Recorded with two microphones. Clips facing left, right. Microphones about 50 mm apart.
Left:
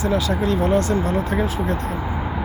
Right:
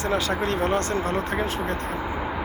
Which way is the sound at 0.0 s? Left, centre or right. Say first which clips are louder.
Left 3 dB; right.